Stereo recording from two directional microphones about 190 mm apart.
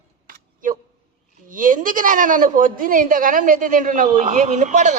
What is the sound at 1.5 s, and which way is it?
A woman's voice, 45° right (ahead or behind).